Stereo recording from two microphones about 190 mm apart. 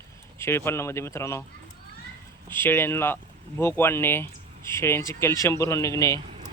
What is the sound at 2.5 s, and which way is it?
Speech, 10° left (ahead or behind).